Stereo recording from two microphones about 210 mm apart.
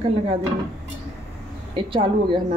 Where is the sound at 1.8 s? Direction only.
25° right (ahead or behind).